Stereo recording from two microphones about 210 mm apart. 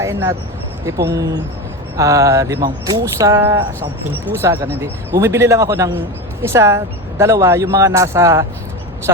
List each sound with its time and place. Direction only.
0.0 s speech: 10° right (ahead or behind)
0.9 s speech: 50° right (ahead or behind)
2.0 s speech: 15° right (ahead or behind)